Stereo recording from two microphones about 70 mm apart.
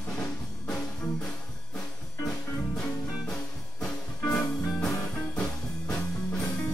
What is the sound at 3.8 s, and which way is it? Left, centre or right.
Music, centre.